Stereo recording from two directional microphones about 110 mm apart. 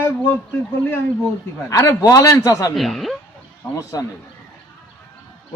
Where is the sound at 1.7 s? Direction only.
30° left (ahead or behind).